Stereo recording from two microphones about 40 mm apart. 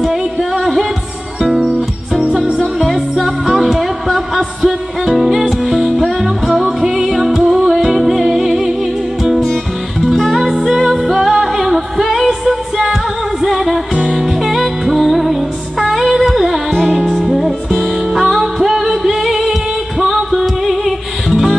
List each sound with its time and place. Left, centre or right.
0.0 s singing: centre
1.4 s music: centre